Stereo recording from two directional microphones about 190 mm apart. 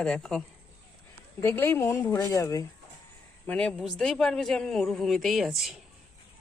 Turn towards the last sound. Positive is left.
turn(degrees=0)  # may be behind; listen again after turning